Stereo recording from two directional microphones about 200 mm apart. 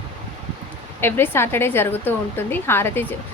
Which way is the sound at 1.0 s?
10° left (ahead or behind).